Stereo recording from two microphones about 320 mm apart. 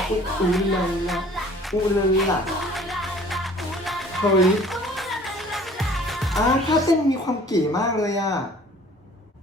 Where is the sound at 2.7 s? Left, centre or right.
Centre.